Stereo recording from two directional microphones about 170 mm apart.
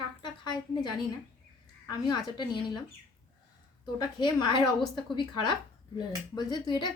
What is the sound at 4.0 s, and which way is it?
A woman's voice, 25° left (ahead or behind).